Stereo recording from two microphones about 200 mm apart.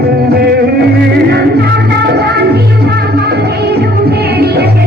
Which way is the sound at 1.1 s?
55° right (ahead or behind).